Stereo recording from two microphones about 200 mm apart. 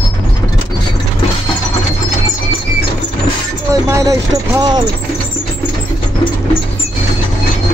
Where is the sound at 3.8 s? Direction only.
15° right (ahead or behind).